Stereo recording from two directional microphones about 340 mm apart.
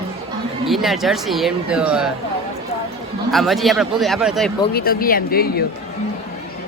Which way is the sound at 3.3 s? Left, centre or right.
Centre.